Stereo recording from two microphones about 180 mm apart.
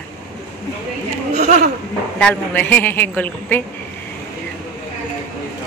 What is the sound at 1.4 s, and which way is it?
Speech, 45° right (ahead or behind).